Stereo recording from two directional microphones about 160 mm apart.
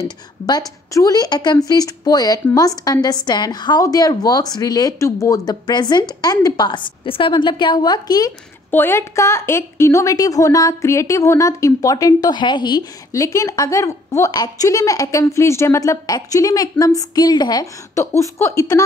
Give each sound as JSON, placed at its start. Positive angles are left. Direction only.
{"t": 0.5, "sound": "a woman's voice", "side_deg": 20}